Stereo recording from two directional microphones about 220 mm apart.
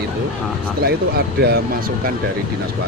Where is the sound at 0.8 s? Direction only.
45° right (ahead or behind).